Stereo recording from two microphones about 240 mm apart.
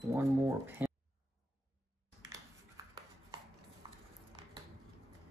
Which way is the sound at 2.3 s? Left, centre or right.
Centre.